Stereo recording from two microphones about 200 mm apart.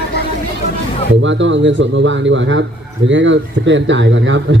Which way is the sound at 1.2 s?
65° right (ahead or behind).